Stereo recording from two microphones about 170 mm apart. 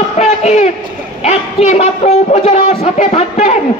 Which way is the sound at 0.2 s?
40° left (ahead or behind).